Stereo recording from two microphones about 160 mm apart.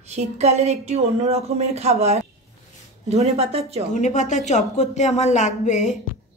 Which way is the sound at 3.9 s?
50° left (ahead or behind).